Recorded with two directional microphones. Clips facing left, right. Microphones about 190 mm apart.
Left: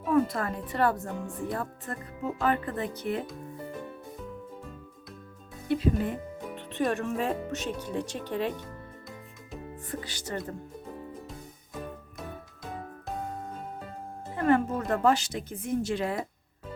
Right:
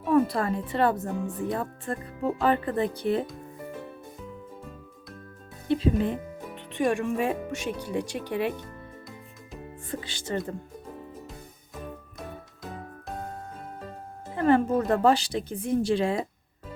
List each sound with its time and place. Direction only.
0.1 s a woman's voice: 30° right (ahead or behind)
2.2 s speech: 30° right (ahead or behind)
5.6 s speech: 25° right (ahead or behind)
6.7 s speech: 15° right (ahead or behind)
8.6 s music: centre (ahead or behind)
9.9 s a woman's voice: 25° right (ahead or behind)
14.3 s speech: 30° right (ahead or behind)